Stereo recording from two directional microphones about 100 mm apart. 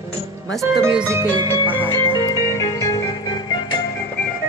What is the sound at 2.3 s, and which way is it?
Music, 35° left (ahead or behind).